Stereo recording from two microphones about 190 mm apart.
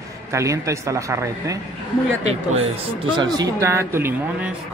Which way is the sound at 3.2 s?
20° right (ahead or behind).